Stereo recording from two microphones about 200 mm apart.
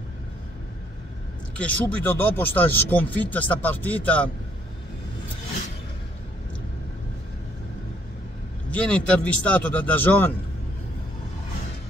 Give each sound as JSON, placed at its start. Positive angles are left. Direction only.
{"t": 1.6, "sound": "speech", "side_deg": 10}
{"t": 8.6, "sound": "speech", "side_deg": 5}